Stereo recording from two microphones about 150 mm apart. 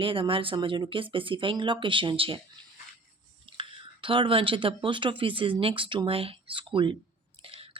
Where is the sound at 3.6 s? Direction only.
35° right (ahead or behind).